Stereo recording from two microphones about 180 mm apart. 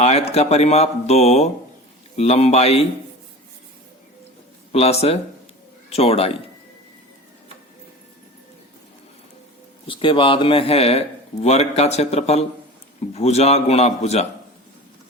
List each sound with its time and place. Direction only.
0.0 s speech: 35° left (ahead or behind)
4.7 s speech: 35° left (ahead or behind)
9.8 s speech: 30° left (ahead or behind)